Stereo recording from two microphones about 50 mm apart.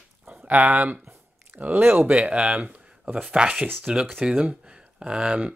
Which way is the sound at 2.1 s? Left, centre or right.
Right.